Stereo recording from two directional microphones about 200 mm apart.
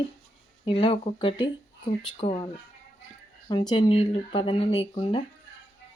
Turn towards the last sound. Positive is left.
turn(degrees=25)  # may be behind; listen again after turning